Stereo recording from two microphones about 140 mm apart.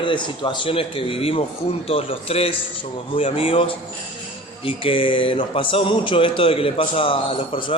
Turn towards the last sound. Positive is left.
turn(degrees=40)  # may be behind; listen again after turning